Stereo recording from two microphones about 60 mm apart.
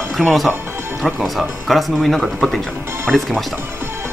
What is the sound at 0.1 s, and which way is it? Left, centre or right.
Speech, centre.